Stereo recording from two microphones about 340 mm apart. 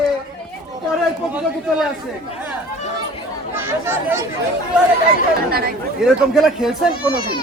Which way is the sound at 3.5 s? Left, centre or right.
Centre.